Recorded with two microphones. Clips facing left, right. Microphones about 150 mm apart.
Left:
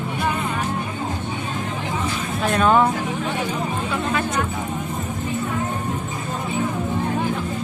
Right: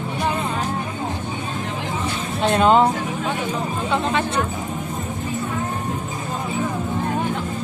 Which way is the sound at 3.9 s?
25° right (ahead or behind).